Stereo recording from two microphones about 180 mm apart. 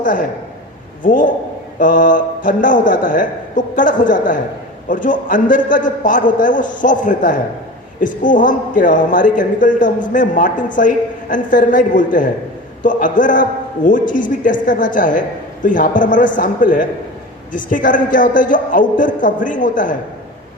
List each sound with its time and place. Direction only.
0.0 s a man's voice: 45° left (ahead or behind)